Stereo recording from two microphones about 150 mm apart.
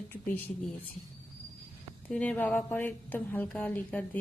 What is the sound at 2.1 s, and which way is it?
Speech, 10° left (ahead or behind).